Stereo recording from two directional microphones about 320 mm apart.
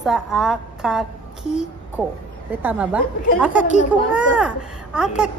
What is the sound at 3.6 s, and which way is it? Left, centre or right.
Speech, left.